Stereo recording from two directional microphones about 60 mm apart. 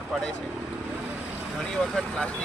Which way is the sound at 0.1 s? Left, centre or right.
Centre.